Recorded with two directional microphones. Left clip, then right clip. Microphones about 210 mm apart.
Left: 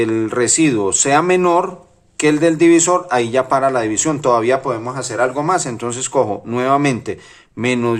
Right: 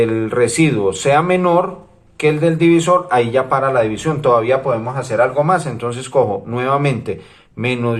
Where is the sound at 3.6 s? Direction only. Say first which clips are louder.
Right 1 dB; 55° left (ahead or behind).